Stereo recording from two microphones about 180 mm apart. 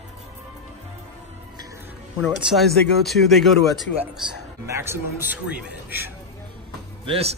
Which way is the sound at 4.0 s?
15° right (ahead or behind).